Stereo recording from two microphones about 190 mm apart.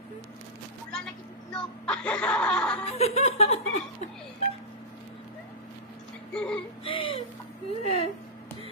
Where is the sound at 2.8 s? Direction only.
35° left (ahead or behind).